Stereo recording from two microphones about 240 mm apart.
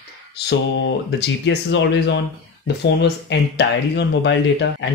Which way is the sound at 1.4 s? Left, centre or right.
Left.